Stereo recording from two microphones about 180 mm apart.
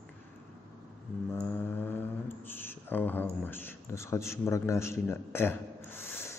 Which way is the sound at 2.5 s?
10° left (ahead or behind).